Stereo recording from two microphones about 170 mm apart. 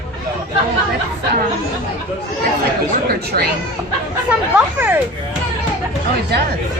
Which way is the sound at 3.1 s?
65° right (ahead or behind).